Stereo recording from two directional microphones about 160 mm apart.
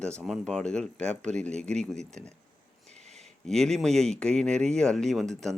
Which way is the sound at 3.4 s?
5° left (ahead or behind).